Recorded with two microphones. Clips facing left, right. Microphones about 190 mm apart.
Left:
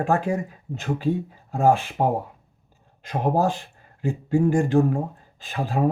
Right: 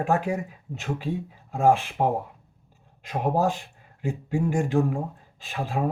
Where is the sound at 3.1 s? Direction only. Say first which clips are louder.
Left 2 dB; centre (ahead or behind).